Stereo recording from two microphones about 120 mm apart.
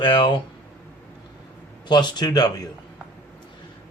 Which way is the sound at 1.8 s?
40° left (ahead or behind).